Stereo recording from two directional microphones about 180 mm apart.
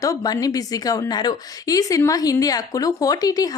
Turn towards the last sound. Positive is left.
turn(degrees=20)  # may be behind; listen again after turning